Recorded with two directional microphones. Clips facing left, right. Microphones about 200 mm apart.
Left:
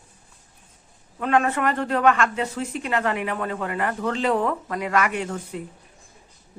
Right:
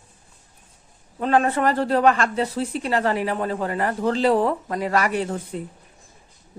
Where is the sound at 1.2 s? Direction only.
35° right (ahead or behind).